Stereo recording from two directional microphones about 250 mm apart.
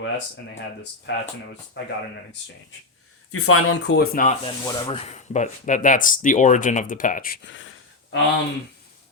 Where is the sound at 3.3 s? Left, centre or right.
Left.